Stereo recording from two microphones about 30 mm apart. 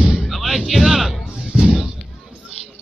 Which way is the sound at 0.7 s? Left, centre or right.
Centre.